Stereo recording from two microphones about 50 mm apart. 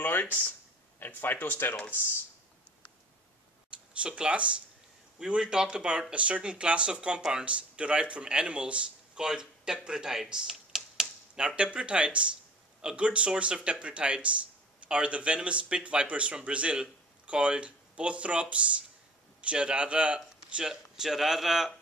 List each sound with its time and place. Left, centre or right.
0.0 s speech: left
3.7 s speech: right
10.5 s computer keyboard: centre
11.3 s speech: right
20.5 s speech: centre